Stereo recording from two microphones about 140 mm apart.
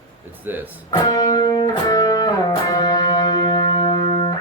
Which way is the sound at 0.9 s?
25° left (ahead or behind).